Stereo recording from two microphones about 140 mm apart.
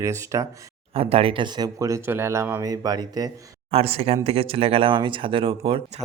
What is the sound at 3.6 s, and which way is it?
Speech, 45° right (ahead or behind).